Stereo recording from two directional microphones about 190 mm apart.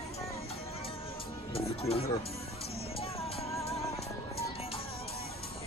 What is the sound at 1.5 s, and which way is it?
Music, 30° left (ahead or behind).